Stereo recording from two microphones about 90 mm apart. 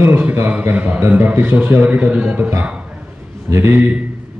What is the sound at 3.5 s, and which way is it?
Speech, 30° right (ahead or behind).